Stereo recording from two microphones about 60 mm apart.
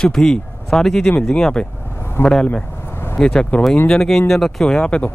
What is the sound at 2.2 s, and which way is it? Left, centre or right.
Speech, left.